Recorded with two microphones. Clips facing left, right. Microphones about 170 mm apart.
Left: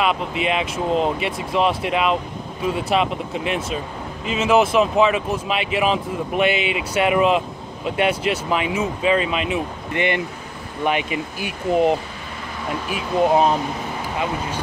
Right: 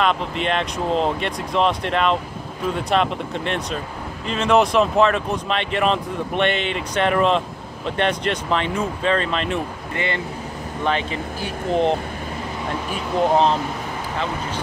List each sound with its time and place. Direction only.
0.0 s speech: 5° left (ahead or behind)
9.9 s speech: 20° left (ahead or behind)
12.9 s speech: 10° left (ahead or behind)